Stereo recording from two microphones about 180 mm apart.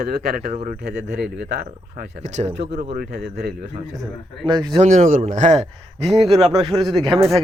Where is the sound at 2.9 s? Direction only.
60° right (ahead or behind).